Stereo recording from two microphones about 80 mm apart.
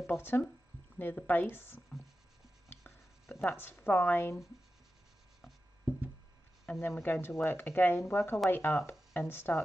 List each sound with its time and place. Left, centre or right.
0.0 s speech: left
2.8 s a sound: centre
3.4 s speech: left
6.8 s speech: left